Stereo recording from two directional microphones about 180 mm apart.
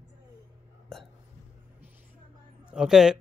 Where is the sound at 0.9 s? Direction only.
Centre (ahead or behind).